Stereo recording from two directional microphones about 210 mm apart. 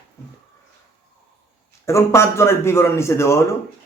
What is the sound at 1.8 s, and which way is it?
Speech, 15° left (ahead or behind).